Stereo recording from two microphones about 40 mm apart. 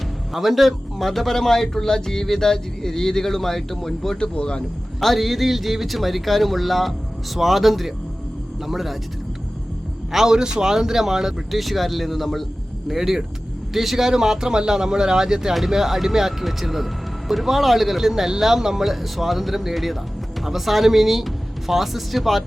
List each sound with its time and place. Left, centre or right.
0.3 s speech: centre
4.2 s speech: left
4.9 s speech: centre
10.1 s speech: centre
12.9 s speech: centre
14.1 s speech: centre